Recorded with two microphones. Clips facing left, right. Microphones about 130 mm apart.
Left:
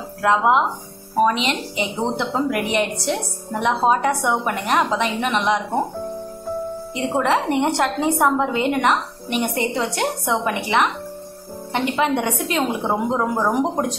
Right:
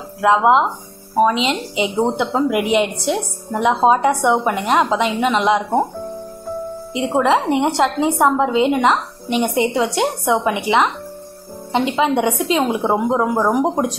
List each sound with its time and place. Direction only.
0.2 s a woman's voice: 20° right (ahead or behind)
6.9 s a woman's voice: 15° right (ahead or behind)